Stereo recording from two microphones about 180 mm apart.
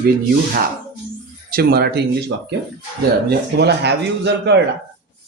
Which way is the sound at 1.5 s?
60° right (ahead or behind).